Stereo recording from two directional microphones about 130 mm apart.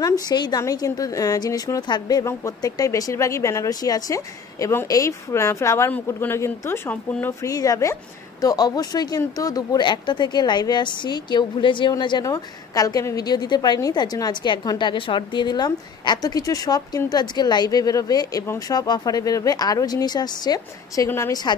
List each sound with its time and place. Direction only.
0.0 s speech: 30° left (ahead or behind); by 7.3 s 15° left (ahead or behind)
7.4 s a woman's voice: 25° left (ahead or behind)